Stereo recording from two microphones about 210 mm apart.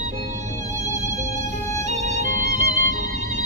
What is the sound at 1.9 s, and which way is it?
Music, 35° right (ahead or behind).